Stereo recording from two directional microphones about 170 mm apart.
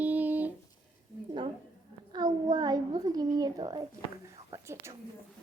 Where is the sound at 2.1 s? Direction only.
25° right (ahead or behind).